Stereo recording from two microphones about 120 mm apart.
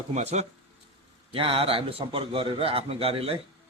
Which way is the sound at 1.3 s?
50° right (ahead or behind).